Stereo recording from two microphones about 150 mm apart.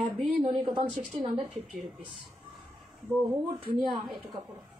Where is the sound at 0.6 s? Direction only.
35° right (ahead or behind).